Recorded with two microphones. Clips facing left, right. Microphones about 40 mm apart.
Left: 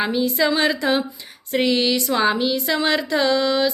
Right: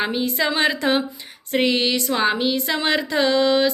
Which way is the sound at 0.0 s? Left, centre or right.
Right.